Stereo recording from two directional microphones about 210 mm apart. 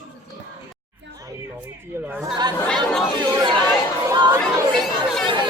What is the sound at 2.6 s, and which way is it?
Speech, 5° left (ahead or behind).